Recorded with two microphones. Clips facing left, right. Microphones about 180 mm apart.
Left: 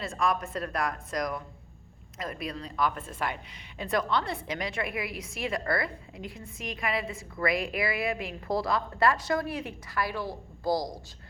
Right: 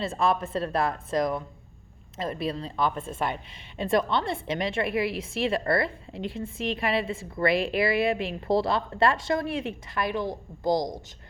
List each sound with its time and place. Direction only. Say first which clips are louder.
0.0 s a woman's voice: right 4 dB; 30° right (ahead or behind)